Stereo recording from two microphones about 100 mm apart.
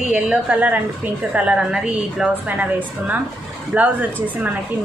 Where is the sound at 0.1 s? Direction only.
15° right (ahead or behind).